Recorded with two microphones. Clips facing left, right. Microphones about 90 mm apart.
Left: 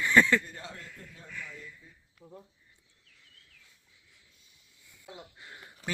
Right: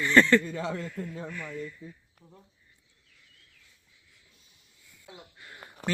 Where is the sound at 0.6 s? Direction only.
85° right.